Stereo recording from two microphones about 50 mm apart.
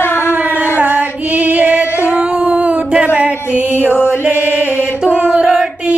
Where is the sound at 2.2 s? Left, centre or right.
Right.